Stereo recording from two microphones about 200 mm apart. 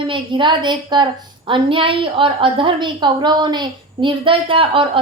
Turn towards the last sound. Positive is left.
turn(degrees=-25)  # may be behind; listen again after turning